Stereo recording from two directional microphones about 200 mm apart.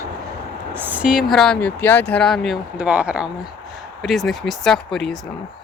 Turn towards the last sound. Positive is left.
turn(degrees=0)  # may be behind; listen again after turning